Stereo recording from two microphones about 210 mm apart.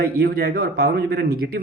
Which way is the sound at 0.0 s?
50° right (ahead or behind).